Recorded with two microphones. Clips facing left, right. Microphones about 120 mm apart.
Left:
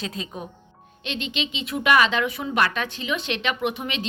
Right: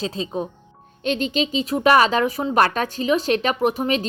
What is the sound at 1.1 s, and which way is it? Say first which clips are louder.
Speech: right 8 dB; 40° right (ahead or behind).